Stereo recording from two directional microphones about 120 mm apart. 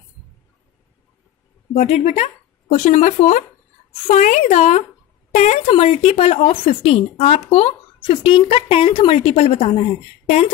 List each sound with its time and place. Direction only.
1.7 s a woman's voice: 70° left (ahead or behind)
5.7 s speech: 60° left (ahead or behind)